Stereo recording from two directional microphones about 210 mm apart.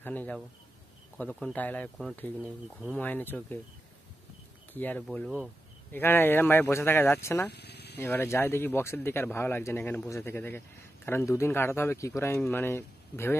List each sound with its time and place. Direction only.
0.0 s speech: 10° left (ahead or behind)
4.7 s speech: 10° left (ahead or behind)
7.5 s a sound: 50° left (ahead or behind)
8.1 s speech: 10° left (ahead or behind)